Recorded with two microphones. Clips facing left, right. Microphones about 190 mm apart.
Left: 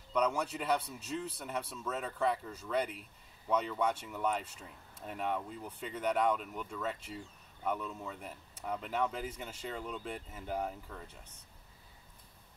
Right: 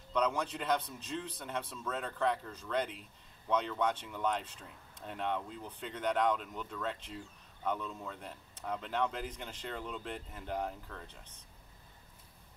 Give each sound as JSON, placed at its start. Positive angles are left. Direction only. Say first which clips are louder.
{"t": 0.1, "sound": "speech", "louder": "left 1 dB", "side_deg": 10}